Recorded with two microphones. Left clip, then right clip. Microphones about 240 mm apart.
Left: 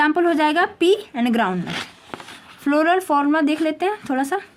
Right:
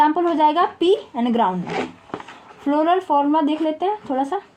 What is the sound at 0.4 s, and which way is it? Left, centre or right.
Speech, left.